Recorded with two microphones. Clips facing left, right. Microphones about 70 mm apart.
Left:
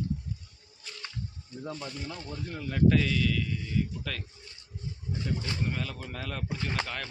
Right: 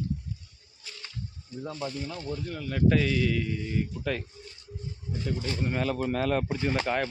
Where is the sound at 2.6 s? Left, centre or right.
Centre.